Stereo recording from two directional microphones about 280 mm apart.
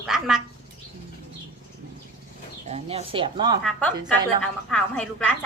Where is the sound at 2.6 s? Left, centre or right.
Right.